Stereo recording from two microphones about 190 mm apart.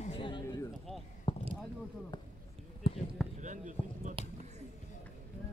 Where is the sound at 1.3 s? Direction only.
25° left (ahead or behind).